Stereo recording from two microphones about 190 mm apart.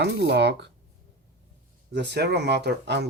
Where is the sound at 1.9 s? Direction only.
60° right (ahead or behind).